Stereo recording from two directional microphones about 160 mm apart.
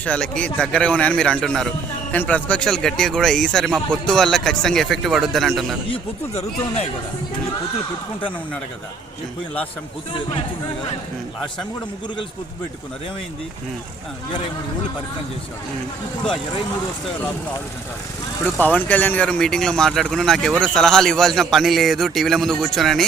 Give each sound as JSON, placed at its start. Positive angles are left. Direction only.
{"t": 0.0, "sound": "a man's voice", "side_deg": 5}
{"t": 5.9, "sound": "speech", "side_deg": 40}
{"t": 18.6, "sound": "speech", "side_deg": 10}